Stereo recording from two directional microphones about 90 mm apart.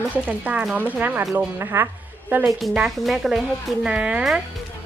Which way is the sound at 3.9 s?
15° right (ahead or behind).